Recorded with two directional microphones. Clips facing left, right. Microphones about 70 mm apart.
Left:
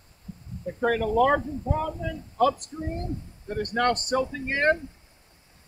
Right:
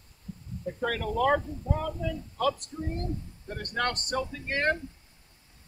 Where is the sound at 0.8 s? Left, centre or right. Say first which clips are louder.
Left 7 dB; left.